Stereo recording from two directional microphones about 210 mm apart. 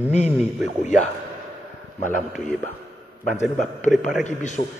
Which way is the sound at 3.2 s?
35° left (ahead or behind).